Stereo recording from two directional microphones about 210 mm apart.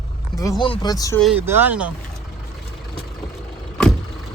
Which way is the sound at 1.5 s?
10° right (ahead or behind).